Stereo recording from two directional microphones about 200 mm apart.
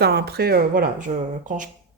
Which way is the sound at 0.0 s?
55° right (ahead or behind).